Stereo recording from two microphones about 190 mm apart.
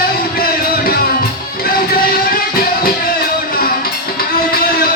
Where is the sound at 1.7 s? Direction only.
50° left (ahead or behind).